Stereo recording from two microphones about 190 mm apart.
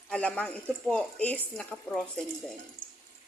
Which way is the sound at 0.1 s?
5° left (ahead or behind).